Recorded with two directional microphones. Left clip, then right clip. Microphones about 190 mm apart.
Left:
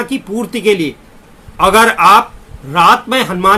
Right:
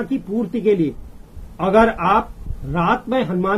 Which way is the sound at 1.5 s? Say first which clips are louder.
Left 7 dB; 10° left (ahead or behind).